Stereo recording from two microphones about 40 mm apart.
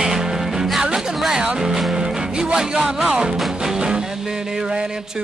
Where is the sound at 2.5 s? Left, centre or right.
Centre.